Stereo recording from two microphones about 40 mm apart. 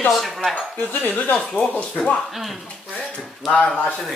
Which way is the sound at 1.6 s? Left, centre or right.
Left.